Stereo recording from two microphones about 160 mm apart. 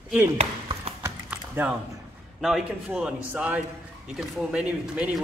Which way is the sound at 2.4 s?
5° right (ahead or behind).